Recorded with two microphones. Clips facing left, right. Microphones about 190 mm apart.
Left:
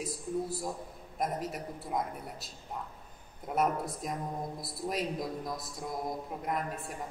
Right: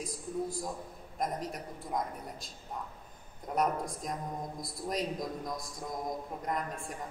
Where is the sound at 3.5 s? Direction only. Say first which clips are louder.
Left 1 dB; 5° left (ahead or behind).